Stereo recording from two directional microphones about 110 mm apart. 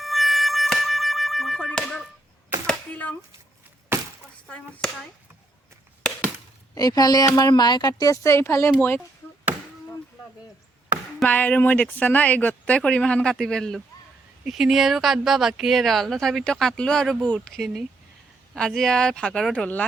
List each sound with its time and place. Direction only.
0.0 s a sound: centre (ahead or behind)
3.9 s a sound: 20° right (ahead or behind)
4.4 s speech: 10° left (ahead or behind)
6.0 s chop: 5° left (ahead or behind)
6.7 s a woman's voice: 35° left (ahead or behind)
11.3 s speech: 15° left (ahead or behind)